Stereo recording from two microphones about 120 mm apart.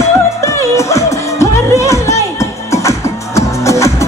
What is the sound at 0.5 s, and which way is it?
Music, 25° left (ahead or behind).